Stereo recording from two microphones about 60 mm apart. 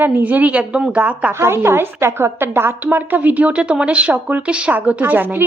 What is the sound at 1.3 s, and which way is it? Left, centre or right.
Speech, right.